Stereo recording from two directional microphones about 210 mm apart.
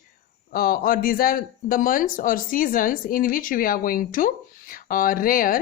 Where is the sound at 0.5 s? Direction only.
45° left (ahead or behind).